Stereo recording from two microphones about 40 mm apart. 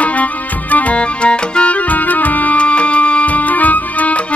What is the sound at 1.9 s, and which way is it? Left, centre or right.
Music, left.